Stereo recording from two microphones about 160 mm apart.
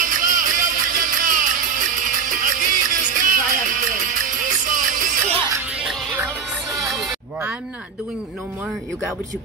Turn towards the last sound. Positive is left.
turn(degrees=0)  # may be behind; listen again after turning